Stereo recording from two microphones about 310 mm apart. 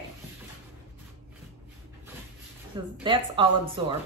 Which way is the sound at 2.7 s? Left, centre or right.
Centre.